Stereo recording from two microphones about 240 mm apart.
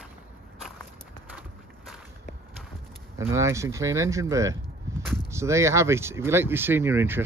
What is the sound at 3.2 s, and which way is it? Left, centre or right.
Speech, centre.